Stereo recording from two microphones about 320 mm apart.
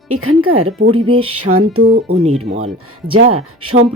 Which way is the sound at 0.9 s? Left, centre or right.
Centre.